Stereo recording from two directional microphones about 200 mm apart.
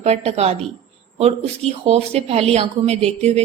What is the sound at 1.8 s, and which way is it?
A woman's voice, 30° right (ahead or behind).